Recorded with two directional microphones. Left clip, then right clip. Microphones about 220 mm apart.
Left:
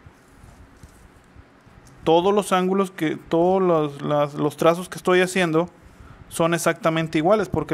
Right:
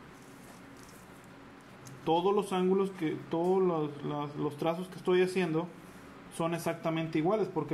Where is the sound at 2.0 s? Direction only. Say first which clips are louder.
Left 10 dB; 50° left (ahead or behind).